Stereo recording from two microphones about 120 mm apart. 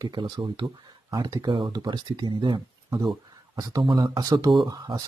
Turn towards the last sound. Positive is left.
turn(degrees=-30)  # may be behind; listen again after turning